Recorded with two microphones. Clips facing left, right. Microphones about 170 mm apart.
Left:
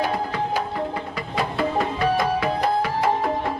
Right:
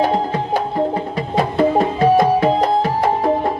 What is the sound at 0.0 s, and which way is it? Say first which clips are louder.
Music: right 6 dB; 30° right (ahead or behind).